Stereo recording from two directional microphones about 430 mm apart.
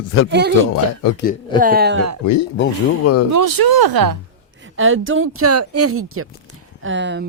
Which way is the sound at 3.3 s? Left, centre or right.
Right.